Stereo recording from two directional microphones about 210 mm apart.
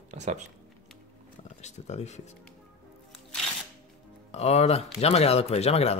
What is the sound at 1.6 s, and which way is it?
Speech, 30° left (ahead or behind).